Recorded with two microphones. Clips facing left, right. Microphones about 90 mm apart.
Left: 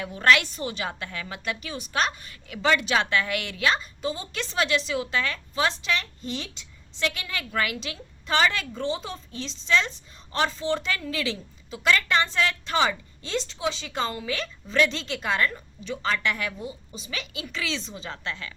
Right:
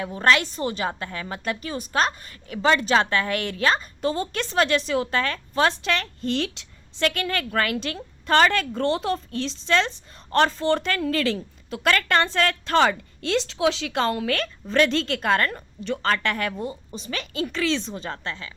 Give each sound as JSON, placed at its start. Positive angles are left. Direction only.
{"t": 0.0, "sound": "a woman's voice", "side_deg": -35}
{"t": 7.1, "sound": "a woman's voice", "side_deg": -50}
{"t": 8.8, "sound": "a woman's voice", "side_deg": -75}